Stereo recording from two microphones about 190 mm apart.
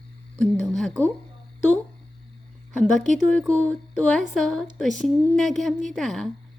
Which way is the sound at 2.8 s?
Centre (ahead or behind).